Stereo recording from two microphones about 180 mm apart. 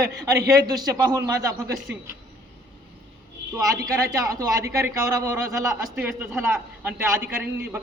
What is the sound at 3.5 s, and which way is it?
A man's voice, 15° right (ahead or behind).